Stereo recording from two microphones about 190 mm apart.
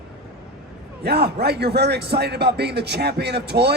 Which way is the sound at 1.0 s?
60° right (ahead or behind).